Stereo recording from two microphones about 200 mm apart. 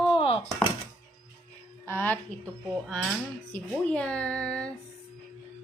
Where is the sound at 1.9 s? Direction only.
10° left (ahead or behind).